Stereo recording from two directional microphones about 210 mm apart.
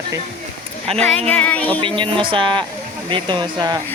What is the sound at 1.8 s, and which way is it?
Speech, 25° right (ahead or behind).